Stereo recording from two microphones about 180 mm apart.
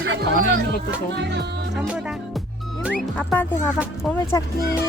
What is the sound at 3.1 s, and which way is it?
Music, 10° left (ahead or behind).